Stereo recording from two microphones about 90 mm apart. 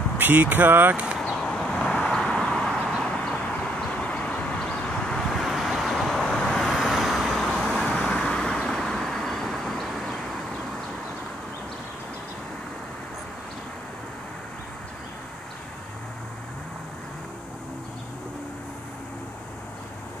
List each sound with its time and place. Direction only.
0.2 s speech: 20° right (ahead or behind)
1.1 s a sound: centre (ahead or behind)
3.0 s vehicle: 10° left (ahead or behind)